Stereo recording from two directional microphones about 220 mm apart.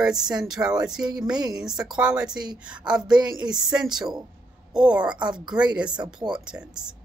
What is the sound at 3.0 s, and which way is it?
Speech, 20° right (ahead or behind).